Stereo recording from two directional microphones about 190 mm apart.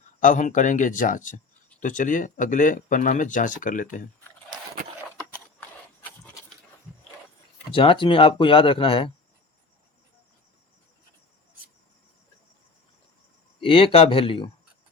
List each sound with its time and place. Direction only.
0.2 s speech: 40° left (ahead or behind)
7.7 s speech: 30° left (ahead or behind)
13.6 s speech: 30° left (ahead or behind)